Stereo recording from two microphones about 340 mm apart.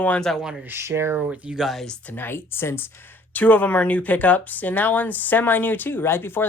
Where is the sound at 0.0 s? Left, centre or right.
Centre.